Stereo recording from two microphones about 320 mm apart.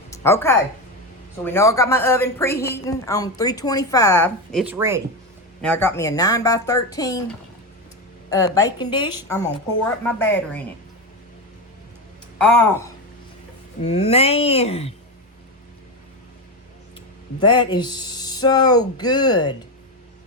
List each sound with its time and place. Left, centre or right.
0.1 s a woman's voice: centre
4.6 s speech: centre
5.6 s a woman's voice: centre
8.3 s a woman's voice: centre
12.4 s speech: centre
13.8 s speech: centre
17.4 s a woman's voice: centre